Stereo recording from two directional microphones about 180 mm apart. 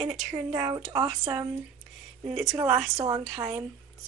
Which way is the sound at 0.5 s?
25° right (ahead or behind).